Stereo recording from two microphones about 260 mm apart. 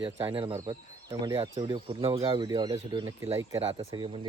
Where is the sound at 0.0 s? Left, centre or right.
Centre.